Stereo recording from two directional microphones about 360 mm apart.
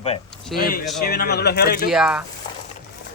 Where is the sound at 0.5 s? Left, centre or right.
Centre.